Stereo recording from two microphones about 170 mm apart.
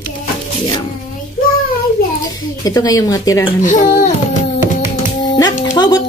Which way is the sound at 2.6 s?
20° left (ahead or behind).